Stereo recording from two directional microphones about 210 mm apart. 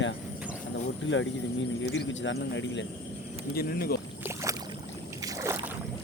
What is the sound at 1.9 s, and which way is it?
Speech, 60° left (ahead or behind).